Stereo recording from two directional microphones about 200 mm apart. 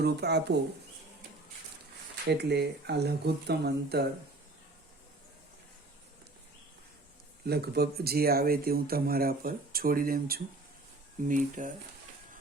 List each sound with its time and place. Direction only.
0.0 s speech: 55° right (ahead or behind)
2.2 s speech: 55° right (ahead or behind)
7.4 s speech: 55° right (ahead or behind)